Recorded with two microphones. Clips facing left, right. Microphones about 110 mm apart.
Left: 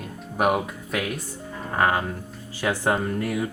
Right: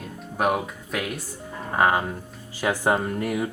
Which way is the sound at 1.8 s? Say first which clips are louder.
Right 1 dB; 15° right (ahead or behind).